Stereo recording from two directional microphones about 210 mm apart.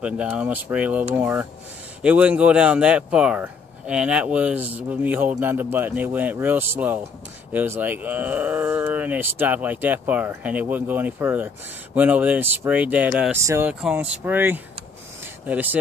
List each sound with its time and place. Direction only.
0.0 s speech: 5° right (ahead or behind)